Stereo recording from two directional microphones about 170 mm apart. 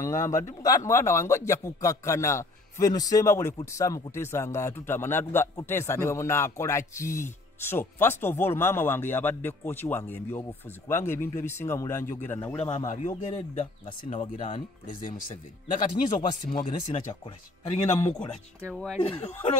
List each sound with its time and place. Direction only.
0.2 s a man's voice: 15° left (ahead or behind)
12.8 s speech: 45° left (ahead or behind)
15.7 s speech: 50° left (ahead or behind)
18.9 s a man's voice: 35° left (ahead or behind)